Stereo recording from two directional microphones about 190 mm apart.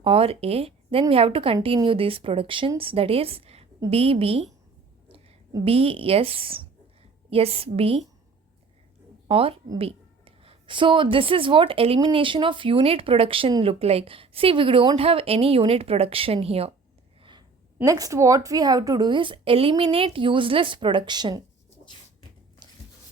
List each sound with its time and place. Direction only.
0.0 s a woman's voice: 30° right (ahead or behind)
9.2 s a woman's voice: 30° right (ahead or behind)
17.7 s a woman's voice: 20° right (ahead or behind)
22.6 s a sound: 25° right (ahead or behind)